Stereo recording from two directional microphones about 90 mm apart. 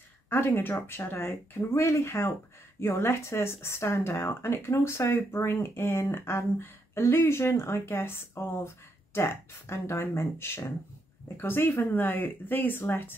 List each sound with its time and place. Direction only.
0.3 s speech: 25° left (ahead or behind)